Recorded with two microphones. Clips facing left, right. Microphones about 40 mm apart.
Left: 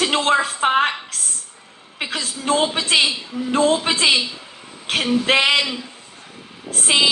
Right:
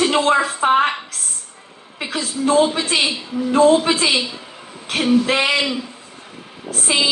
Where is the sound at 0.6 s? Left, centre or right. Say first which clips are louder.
Right 4 dB; left.